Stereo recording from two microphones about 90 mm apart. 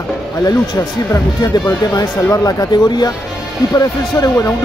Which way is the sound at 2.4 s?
45° left (ahead or behind).